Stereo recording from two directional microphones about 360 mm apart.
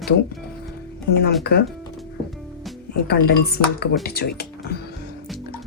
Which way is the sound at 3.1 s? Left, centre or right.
Left.